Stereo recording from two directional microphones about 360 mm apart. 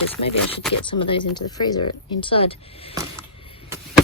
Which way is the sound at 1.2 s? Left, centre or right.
Left.